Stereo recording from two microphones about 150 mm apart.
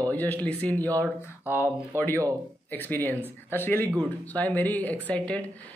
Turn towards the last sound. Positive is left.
turn(degrees=10)  # may be behind; listen again after turning